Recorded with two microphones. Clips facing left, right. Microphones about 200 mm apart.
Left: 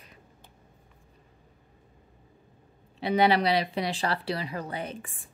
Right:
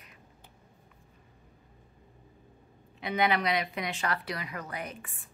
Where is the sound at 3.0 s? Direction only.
35° left (ahead or behind).